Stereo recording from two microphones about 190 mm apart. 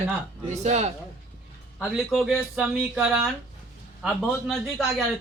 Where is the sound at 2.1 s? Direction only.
Centre (ahead or behind).